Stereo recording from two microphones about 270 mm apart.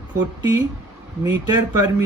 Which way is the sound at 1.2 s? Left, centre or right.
Centre.